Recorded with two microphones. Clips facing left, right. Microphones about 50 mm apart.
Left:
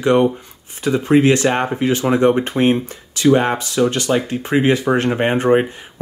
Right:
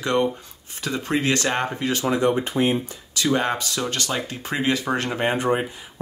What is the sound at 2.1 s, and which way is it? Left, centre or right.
Speech, left.